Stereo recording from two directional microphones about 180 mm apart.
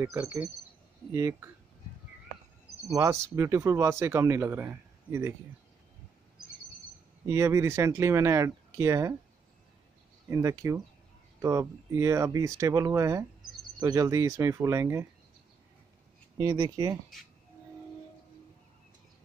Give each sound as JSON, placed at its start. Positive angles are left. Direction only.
{"t": 0.0, "sound": "speech", "side_deg": -10}
{"t": 2.9, "sound": "speech", "side_deg": -15}
{"t": 7.2, "sound": "speech", "side_deg": -15}
{"t": 10.3, "sound": "speech", "side_deg": -15}
{"t": 16.3, "sound": "speech", "side_deg": -20}